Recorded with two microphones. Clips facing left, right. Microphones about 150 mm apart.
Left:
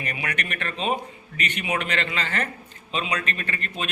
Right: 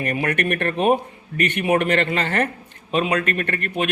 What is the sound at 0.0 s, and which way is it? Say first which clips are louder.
A man's voice: right 9 dB; 50° right (ahead or behind).